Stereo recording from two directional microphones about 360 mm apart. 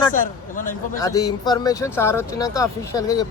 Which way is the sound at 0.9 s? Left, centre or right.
Centre.